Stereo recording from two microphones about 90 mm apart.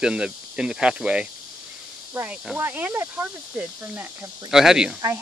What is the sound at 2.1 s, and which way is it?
Speech, 20° right (ahead or behind).